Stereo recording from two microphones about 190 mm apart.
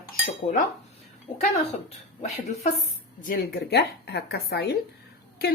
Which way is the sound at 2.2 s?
35° left (ahead or behind).